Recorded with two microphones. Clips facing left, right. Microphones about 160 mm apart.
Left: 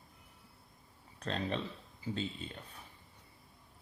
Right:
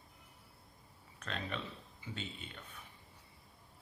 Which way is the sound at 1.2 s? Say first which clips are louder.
Left 6 dB; 35° left (ahead or behind).